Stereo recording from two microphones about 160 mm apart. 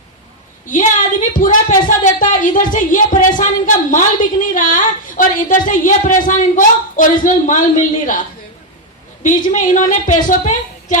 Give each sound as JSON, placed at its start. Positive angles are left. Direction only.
{"t": 1.3, "sound": "a woman's voice", "side_deg": 55}
{"t": 9.2, "sound": "a woman's voice", "side_deg": 50}